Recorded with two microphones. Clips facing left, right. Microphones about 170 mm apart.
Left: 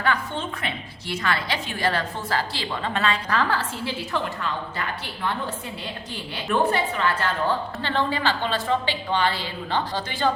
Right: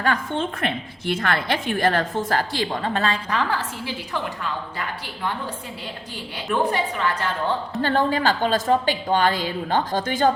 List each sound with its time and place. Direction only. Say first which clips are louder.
0.0 s a woman's voice: right 3 dB; 50° right (ahead or behind)
3.2 s a woman's voice: even; 15° right (ahead or behind)
6.3 s a woman's voice: even; 10° right (ahead or behind)
7.8 s a woman's voice: right 4 dB; 45° right (ahead or behind)